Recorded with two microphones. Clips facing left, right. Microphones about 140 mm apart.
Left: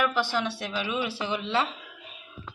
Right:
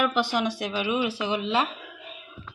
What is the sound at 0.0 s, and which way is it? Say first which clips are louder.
Speech: right 2 dB; 15° right (ahead or behind).